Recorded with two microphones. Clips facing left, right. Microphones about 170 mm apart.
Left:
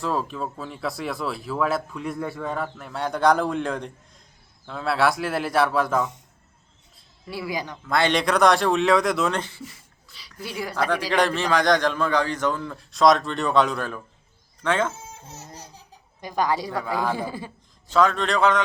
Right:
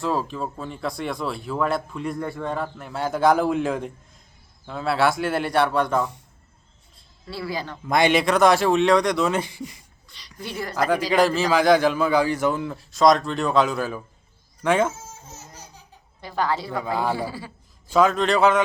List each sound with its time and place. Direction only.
0.0 s speech: centre (ahead or behind)
7.3 s speech: 15° left (ahead or behind)
7.9 s a man's voice: 15° right (ahead or behind)
8.2 s speech: centre (ahead or behind)
9.4 s a man's voice: 15° right (ahead or behind)
10.1 s a sound: 5° left (ahead or behind)
11.1 s a man's voice: 5° right (ahead or behind)
16.2 s speech: 15° left (ahead or behind)
16.7 s a man's voice: 15° right (ahead or behind)
17.2 s a man's voice: 20° left (ahead or behind)
17.8 s a man's voice: 10° right (ahead or behind)